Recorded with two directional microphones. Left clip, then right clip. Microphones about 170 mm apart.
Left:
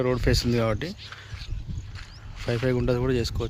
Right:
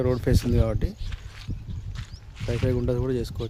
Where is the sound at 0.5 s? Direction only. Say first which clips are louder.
Left 2 dB; centre (ahead or behind).